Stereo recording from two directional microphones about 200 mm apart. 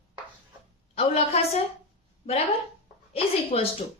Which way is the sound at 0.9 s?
30° left (ahead or behind).